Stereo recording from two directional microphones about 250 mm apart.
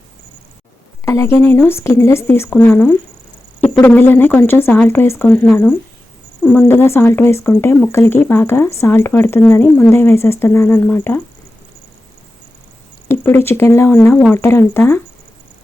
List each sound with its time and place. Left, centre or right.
1.0 s speech: centre
13.1 s speech: centre